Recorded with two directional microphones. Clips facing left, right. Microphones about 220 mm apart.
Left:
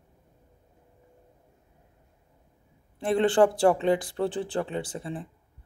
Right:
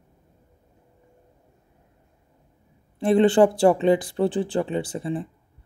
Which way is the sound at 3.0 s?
5° right (ahead or behind).